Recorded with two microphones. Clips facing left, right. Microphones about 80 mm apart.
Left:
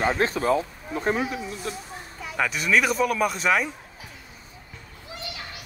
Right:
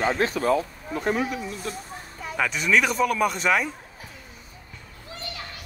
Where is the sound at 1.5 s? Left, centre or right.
Right.